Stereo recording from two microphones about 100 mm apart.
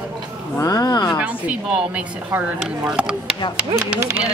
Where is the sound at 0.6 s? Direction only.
40° left (ahead or behind).